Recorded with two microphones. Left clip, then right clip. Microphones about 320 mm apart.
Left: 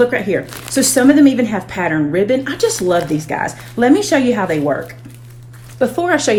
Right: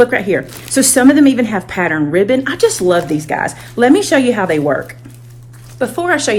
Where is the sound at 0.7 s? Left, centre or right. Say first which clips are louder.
Right 2 dB; right.